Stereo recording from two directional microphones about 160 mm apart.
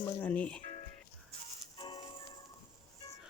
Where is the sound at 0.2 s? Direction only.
10° left (ahead or behind).